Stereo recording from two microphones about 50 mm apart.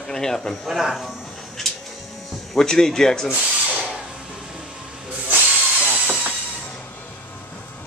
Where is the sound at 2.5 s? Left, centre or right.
Centre.